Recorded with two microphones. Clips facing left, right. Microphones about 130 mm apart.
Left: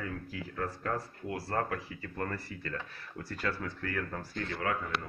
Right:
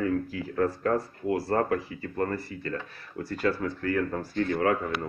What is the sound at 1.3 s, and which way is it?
Speech, 40° right (ahead or behind).